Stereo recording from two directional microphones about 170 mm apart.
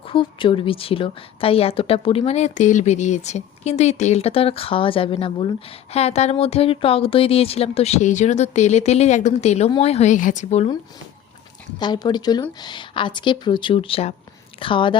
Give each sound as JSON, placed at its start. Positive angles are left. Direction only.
{"t": 0.1, "sound": "a woman's voice", "side_deg": 30}
{"t": 11.8, "sound": "a woman's voice", "side_deg": 25}